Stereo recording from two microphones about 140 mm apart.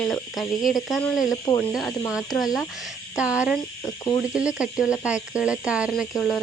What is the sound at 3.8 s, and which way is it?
Speech, 20° left (ahead or behind).